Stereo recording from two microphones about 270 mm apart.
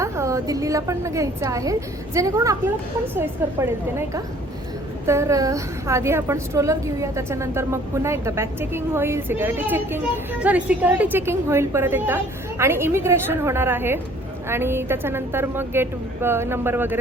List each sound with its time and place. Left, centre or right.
0.0 s a woman's voice: centre